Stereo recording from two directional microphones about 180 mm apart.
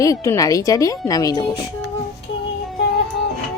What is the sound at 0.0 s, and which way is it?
Speech, 20° left (ahead or behind).